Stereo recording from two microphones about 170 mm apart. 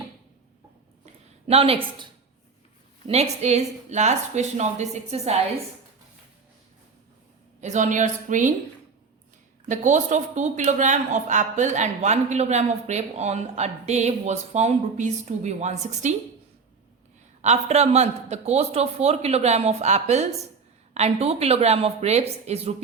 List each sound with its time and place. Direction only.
1.5 s a man's voice: 35° right (ahead or behind)
3.1 s a man's voice: 40° right (ahead or behind)
7.6 s speech: 45° right (ahead or behind)
9.6 s speech: 45° right (ahead or behind)
17.4 s a man's voice: 40° right (ahead or behind)